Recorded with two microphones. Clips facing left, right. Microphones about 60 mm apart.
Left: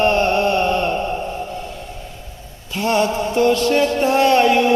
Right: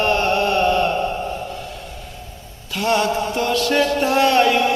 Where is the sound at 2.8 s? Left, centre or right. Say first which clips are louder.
Left 1 dB; left.